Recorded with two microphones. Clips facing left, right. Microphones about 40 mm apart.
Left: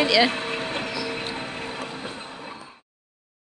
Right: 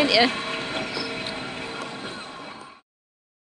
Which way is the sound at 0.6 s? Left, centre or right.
Left.